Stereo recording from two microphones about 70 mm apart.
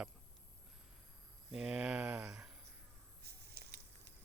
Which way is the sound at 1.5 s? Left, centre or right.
Centre.